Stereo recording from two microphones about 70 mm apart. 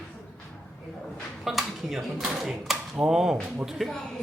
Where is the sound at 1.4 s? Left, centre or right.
Centre.